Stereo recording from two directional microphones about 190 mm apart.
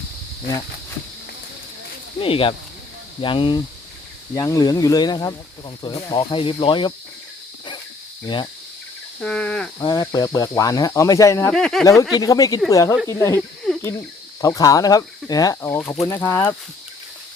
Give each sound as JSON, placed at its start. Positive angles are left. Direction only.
{"t": 2.1, "sound": "speech", "side_deg": 30}
{"t": 8.2, "sound": "speech", "side_deg": 25}
{"t": 9.2, "sound": "speech", "side_deg": 5}
{"t": 9.7, "sound": "speech", "side_deg": 20}
{"t": 11.5, "sound": "speech", "side_deg": 0}
{"t": 12.1, "sound": "speech", "side_deg": 20}
{"t": 13.7, "sound": "cricket", "side_deg": 0}
{"t": 14.4, "sound": "speech", "side_deg": 15}